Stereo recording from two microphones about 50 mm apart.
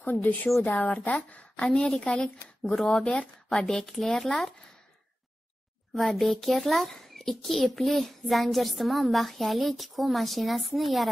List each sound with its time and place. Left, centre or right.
0.0 s a woman's voice: left
1.7 s speech: centre
3.4 s a child's voice: centre
5.9 s a child's voice: centre